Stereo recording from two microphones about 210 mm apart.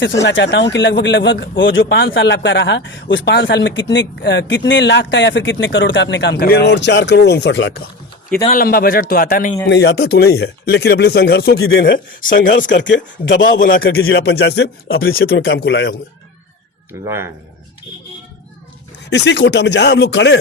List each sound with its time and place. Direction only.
0.0 s speech: 55° left (ahead or behind)
8.4 s speech: 45° left (ahead or behind)
9.6 s speech: 55° left (ahead or behind)
12.2 s speech: 40° left (ahead or behind)
12.7 s speech: 60° left (ahead or behind)
13.6 s speech: 40° left (ahead or behind)
13.9 s music: 75° left (ahead or behind)
14.2 s speech: 50° left (ahead or behind)
17.1 s speech: 10° right (ahead or behind)
19.1 s speech: 55° left (ahead or behind)